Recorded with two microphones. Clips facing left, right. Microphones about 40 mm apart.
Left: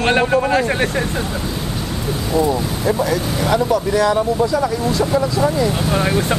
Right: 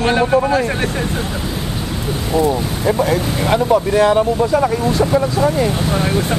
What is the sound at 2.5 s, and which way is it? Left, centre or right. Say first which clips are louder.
Speech: right 1 dB; centre.